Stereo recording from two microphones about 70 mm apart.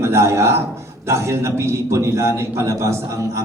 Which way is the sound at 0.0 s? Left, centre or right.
Right.